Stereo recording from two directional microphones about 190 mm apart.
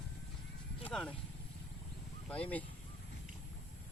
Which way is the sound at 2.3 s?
5° left (ahead or behind).